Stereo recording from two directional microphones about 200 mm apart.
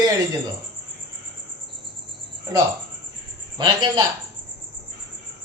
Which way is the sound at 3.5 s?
20° right (ahead or behind).